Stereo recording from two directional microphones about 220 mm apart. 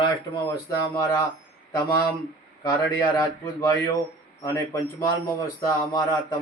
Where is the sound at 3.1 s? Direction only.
15° left (ahead or behind).